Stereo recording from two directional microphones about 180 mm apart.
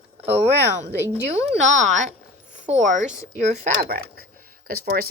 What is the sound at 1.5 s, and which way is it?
Speech, 40° right (ahead or behind).